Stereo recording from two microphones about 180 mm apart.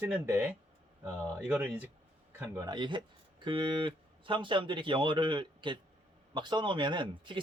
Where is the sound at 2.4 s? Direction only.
20° right (ahead or behind).